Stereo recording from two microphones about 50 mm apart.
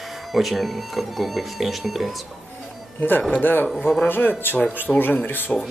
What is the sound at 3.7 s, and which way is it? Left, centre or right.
Speech, centre.